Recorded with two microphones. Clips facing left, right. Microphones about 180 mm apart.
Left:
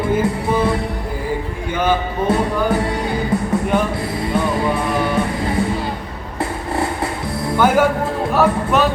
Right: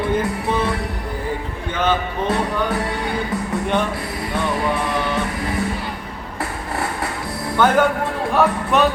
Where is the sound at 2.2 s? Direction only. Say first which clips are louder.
Left 4 dB; 25° left (ahead or behind).